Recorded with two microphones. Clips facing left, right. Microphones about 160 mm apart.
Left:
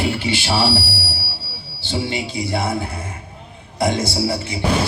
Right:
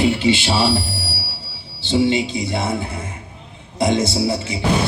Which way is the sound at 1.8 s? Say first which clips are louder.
Right 7 dB; 20° right (ahead or behind).